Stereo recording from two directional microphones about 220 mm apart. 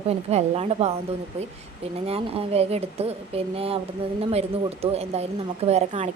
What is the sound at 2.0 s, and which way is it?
A woman's voice, 25° right (ahead or behind).